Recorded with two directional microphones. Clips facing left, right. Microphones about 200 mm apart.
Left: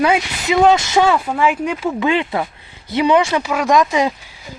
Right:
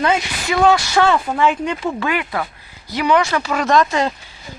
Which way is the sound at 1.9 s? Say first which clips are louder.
Left 4 dB; 25° left (ahead or behind).